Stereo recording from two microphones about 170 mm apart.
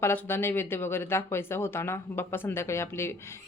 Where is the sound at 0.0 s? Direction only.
15° left (ahead or behind).